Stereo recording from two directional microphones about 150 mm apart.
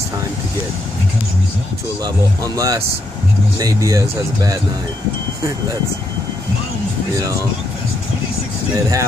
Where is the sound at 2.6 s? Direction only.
25° right (ahead or behind).